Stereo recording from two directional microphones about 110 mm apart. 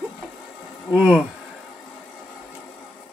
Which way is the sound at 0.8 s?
5° right (ahead or behind).